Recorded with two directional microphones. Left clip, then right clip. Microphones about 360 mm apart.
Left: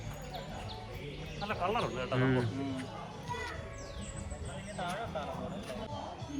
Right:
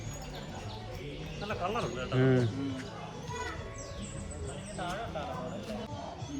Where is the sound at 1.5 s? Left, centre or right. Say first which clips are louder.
Left 1 dB; centre.